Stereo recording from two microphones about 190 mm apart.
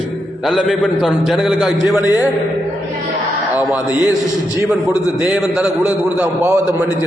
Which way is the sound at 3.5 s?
10° right (ahead or behind).